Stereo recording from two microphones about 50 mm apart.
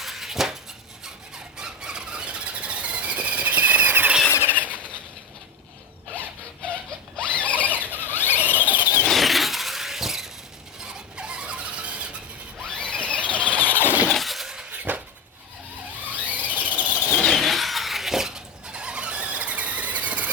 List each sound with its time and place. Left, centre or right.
0.0 s dishes: centre
1.5 s squeal: centre; by 4.8 s right
7.2 s mechanisms: left
7.7 s squeal: right
8.1 s squeal: left
8.6 s squeal: right
9.0 s squeal: centre
10.8 s squeal: centre
12.6 s squeal: centre
14.1 s a sound: centre
14.7 s a sound: right
16.1 s squeal: right
17.2 s vehicle: centre; by 20.3 s right